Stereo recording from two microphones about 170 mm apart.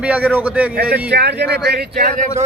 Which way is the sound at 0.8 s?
80° right.